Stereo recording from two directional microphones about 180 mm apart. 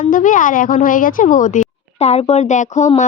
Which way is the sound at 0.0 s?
45° left (ahead or behind).